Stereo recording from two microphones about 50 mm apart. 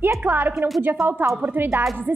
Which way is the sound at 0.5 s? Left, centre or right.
Centre.